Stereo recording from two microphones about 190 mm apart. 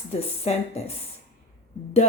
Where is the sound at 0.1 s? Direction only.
30° left (ahead or behind).